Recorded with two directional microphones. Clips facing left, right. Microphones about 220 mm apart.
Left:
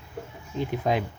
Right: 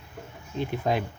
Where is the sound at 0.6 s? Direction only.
15° left (ahead or behind).